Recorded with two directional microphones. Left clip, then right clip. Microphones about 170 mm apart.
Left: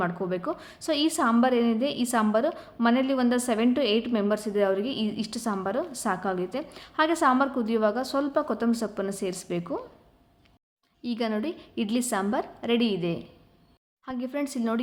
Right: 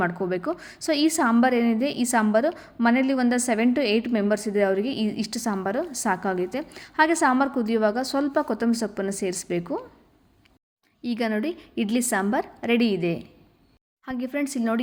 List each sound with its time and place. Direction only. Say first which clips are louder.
0.0 s a woman's voice: right 3 dB; 20° right (ahead or behind)
11.0 s a woman's voice: right 3 dB; 20° right (ahead or behind)